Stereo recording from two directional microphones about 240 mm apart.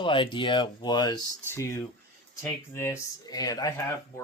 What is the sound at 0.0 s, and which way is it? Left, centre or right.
A man's voice, left.